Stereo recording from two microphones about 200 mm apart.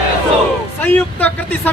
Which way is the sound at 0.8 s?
10° left (ahead or behind).